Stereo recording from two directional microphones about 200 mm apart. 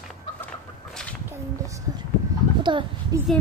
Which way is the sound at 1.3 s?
15° right (ahead or behind).